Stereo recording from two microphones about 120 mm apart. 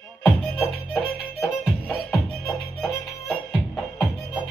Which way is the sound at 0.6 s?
10° right (ahead or behind).